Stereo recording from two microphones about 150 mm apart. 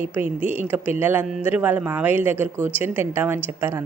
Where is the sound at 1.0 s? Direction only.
15° right (ahead or behind).